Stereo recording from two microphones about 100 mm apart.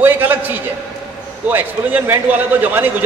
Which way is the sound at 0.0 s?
20° right (ahead or behind).